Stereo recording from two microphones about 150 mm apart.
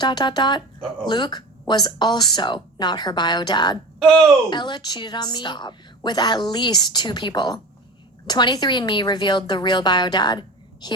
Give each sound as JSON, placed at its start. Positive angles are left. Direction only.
{"t": 0.0, "sound": "a woman's voice", "side_deg": 30}
{"t": 4.0, "sound": "speech", "side_deg": 5}
{"t": 4.4, "sound": "a woman's voice", "side_deg": 30}